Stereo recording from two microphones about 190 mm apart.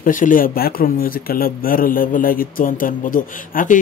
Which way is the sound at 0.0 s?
45° left (ahead or behind).